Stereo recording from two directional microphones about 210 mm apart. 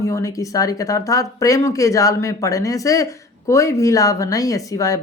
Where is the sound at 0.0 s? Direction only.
15° left (ahead or behind).